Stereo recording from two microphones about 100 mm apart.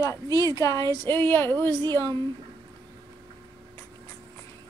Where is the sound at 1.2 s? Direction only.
20° left (ahead or behind).